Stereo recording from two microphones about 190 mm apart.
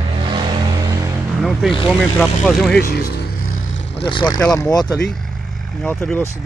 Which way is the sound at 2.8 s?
55° left (ahead or behind).